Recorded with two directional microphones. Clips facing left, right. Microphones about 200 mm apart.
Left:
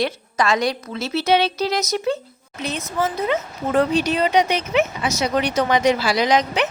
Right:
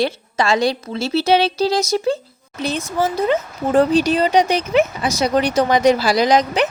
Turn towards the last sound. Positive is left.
turn(degrees=-35)  # may be behind; listen again after turning